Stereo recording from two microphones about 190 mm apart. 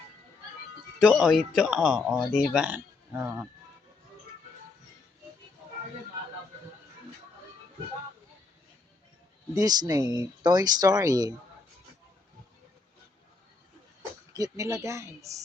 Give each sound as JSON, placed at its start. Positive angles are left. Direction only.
{"t": 0.9, "sound": "speech", "side_deg": 0}
{"t": 9.6, "sound": "speech", "side_deg": -20}
{"t": 14.3, "sound": "speech", "side_deg": -15}